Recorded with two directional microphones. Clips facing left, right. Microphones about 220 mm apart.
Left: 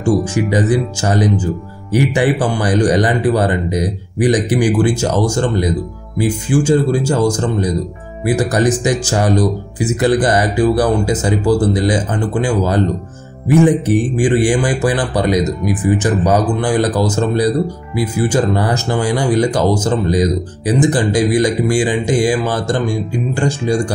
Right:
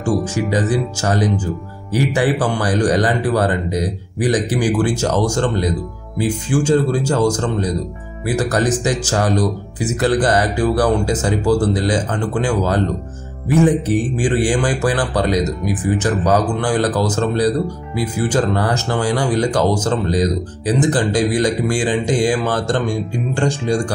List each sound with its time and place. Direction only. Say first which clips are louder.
0.0 s speech: left 4 dB; 15° left (ahead or behind)